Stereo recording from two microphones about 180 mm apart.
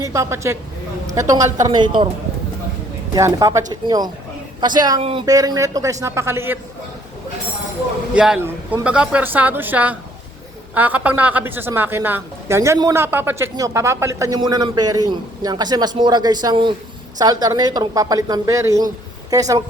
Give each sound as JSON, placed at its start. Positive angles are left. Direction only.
{"t": 0.0, "sound": "a woman's voice", "side_deg": -15}
{"t": 3.2, "sound": "a woman's voice", "side_deg": -15}
{"t": 5.2, "sound": "a woman's voice", "side_deg": -20}
{"t": 8.1, "sound": "a woman's voice", "side_deg": -5}